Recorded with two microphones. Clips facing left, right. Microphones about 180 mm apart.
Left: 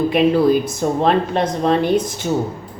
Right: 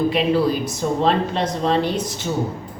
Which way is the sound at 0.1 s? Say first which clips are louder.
Left 5 dB; 50° left (ahead or behind).